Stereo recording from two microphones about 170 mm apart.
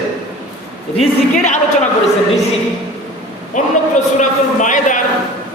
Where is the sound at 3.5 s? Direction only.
45° left (ahead or behind).